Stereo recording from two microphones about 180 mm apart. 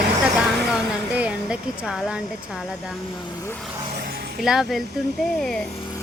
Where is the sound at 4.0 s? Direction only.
60° right (ahead or behind).